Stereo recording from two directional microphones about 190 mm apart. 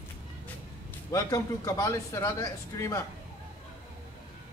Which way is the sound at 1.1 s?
15° left (ahead or behind).